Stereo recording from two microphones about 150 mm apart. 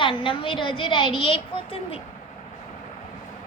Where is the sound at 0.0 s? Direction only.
35° left (ahead or behind).